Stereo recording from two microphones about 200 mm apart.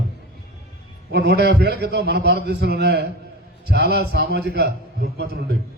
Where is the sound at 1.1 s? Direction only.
55° right (ahead or behind).